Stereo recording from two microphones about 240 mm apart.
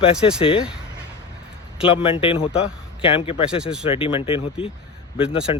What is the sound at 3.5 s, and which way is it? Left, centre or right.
Speech, centre.